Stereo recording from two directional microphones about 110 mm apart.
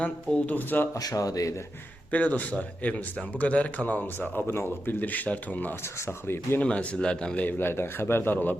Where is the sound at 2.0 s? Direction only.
15° left (ahead or behind).